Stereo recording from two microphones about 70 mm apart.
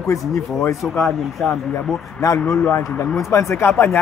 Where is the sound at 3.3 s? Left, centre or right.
Left.